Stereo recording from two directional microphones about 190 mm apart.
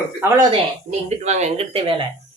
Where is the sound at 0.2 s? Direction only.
15° right (ahead or behind).